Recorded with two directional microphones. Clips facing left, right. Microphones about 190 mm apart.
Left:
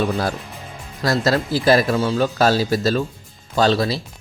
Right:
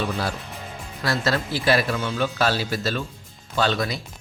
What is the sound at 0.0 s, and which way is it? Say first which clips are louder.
Speech: left 5 dB; 40° left (ahead or behind).